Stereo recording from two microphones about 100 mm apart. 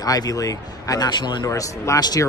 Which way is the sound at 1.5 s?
35° left (ahead or behind).